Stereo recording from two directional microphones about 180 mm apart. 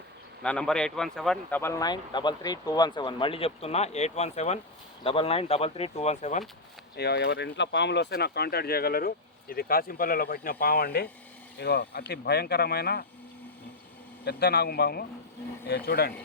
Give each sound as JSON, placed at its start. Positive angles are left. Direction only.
{"t": 0.4, "sound": "speech", "side_deg": 5}
{"t": 1.8, "sound": "speech", "side_deg": 25}
{"t": 6.9, "sound": "speech", "side_deg": 65}
{"t": 14.3, "sound": "speech", "side_deg": 65}